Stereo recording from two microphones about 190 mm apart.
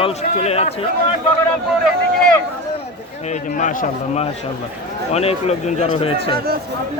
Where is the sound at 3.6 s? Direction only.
40° left (ahead or behind).